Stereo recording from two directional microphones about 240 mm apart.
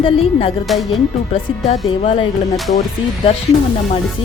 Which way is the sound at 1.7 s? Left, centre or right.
Left.